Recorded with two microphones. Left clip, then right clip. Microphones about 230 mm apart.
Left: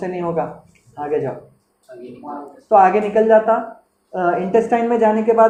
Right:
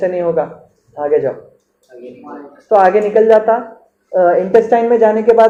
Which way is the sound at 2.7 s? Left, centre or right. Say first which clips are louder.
Right 3 dB; left.